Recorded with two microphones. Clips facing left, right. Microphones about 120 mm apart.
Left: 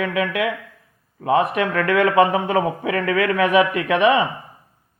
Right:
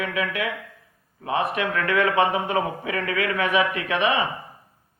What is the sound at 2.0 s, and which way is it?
A man's voice, 40° left (ahead or behind).